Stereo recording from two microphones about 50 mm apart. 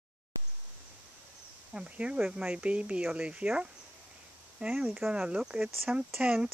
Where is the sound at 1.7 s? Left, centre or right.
Right.